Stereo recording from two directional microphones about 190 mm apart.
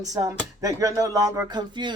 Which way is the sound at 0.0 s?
20° right (ahead or behind).